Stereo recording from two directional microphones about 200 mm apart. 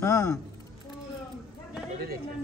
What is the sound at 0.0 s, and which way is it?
Speech, 15° left (ahead or behind).